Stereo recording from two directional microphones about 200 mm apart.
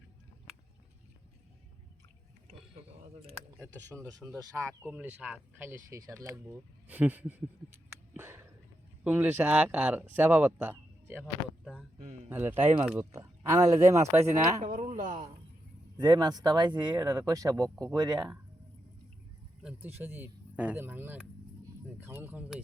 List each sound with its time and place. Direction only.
4.2 s speech: centre (ahead or behind)
8.1 s a sound: 10° right (ahead or behind)
9.0 s speech: 10° right (ahead or behind)
14.6 s speech: 40° right (ahead or behind)
16.0 s speech: 20° right (ahead or behind)
19.6 s speech: 10° right (ahead or behind)